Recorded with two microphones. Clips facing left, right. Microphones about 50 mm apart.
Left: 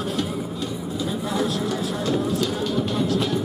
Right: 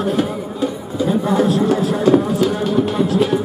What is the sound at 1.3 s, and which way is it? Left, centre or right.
Music, right.